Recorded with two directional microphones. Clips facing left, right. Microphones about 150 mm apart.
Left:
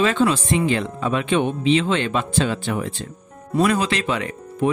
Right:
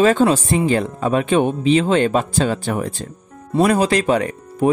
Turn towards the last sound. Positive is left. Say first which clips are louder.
# right 5 dB
turn(degrees=-40)  # may be behind; listen again after turning